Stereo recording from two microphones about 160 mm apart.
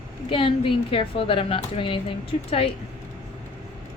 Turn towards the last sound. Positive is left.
turn(degrees=35)  # may be behind; listen again after turning